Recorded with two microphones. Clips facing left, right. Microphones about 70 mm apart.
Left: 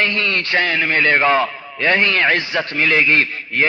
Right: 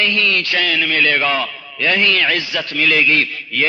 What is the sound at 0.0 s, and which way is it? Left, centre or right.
A man's voice, left.